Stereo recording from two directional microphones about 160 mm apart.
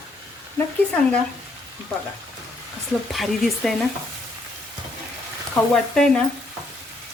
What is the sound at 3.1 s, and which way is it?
Speech, centre (ahead or behind).